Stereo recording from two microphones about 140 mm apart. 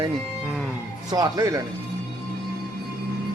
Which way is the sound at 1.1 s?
25° right (ahead or behind).